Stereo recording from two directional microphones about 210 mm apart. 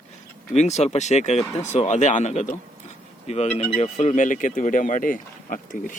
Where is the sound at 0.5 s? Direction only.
30° left (ahead or behind).